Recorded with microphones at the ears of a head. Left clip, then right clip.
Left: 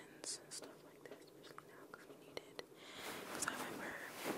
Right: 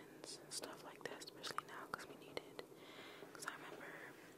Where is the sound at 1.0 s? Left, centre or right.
Right.